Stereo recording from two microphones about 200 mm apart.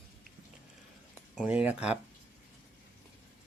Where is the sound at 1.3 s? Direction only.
5° right (ahead or behind).